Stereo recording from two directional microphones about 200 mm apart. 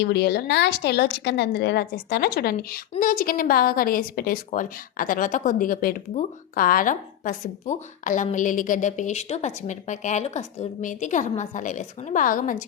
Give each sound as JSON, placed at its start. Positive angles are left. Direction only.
{"t": 0.0, "sound": "a woman's voice", "side_deg": 55}